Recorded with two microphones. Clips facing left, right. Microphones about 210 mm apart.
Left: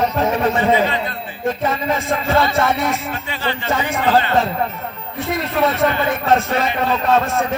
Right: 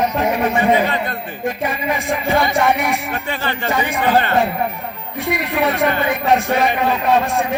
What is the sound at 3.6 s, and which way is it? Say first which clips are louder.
Speech: right 1 dB; 15° right (ahead or behind).